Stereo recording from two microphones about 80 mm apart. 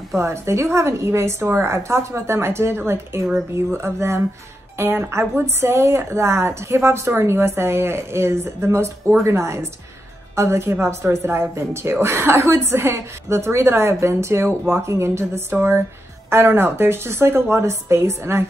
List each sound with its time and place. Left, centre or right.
0.2 s a woman's voice: right